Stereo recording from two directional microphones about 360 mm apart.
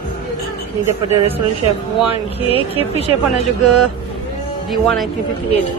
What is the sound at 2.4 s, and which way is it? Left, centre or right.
Speech, centre.